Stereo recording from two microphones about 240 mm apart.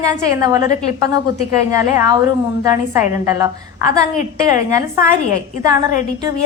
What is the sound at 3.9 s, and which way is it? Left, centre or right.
Speech, left.